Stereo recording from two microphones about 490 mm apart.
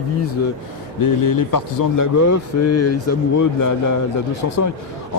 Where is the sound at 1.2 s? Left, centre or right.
Left.